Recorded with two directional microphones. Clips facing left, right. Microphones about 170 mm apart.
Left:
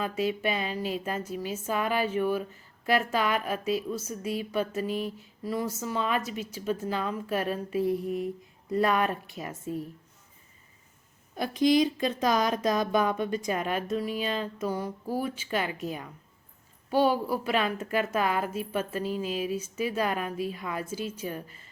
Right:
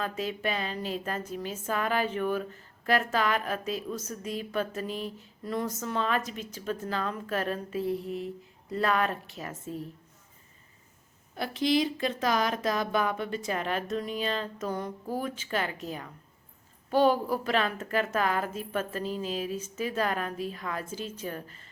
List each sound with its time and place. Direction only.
0.0 s speech: 10° left (ahead or behind)
11.3 s speech: 15° left (ahead or behind)